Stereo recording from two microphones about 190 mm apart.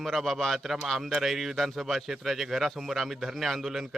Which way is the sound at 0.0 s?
Centre (ahead or behind).